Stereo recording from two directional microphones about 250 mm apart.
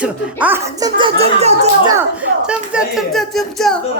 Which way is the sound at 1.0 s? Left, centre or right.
Right.